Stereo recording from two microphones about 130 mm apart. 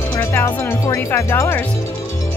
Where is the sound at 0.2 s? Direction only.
20° left (ahead or behind).